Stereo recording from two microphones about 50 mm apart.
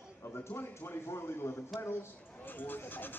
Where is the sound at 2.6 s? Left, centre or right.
Left.